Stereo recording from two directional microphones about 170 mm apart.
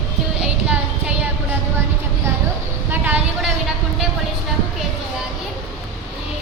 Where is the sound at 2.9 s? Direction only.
10° right (ahead or behind).